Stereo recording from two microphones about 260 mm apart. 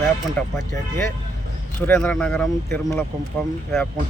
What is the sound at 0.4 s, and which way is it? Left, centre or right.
Speech, centre.